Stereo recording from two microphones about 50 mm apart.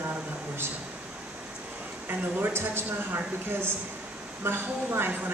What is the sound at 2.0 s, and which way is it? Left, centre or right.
Speech, right.